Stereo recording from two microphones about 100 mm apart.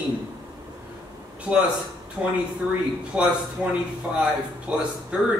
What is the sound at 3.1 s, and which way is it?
Speech, 10° right (ahead or behind).